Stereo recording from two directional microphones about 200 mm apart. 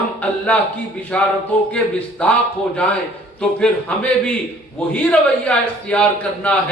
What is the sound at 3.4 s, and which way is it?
Speech, 5° left (ahead or behind).